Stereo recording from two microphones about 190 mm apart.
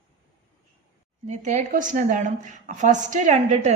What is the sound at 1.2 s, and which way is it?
A woman's voice, 40° right (ahead or behind).